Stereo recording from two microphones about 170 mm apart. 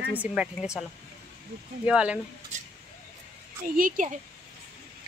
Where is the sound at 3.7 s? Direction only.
50° right (ahead or behind).